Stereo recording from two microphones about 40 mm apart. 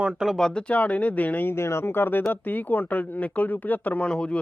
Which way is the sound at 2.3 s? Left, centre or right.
Left.